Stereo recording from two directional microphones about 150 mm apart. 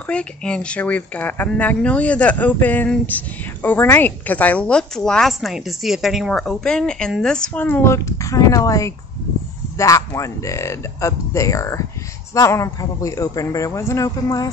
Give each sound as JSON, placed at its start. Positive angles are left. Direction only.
{"t": 0.0, "sound": "a man's voice", "side_deg": 5}